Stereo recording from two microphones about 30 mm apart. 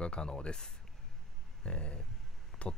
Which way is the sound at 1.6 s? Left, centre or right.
Left.